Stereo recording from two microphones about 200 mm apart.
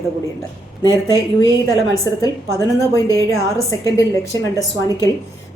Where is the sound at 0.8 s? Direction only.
20° left (ahead or behind).